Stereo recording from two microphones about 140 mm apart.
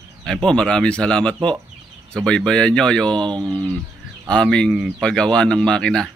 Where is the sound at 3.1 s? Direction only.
35° right (ahead or behind).